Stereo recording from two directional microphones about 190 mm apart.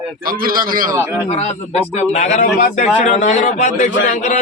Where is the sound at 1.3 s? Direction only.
35° left (ahead or behind).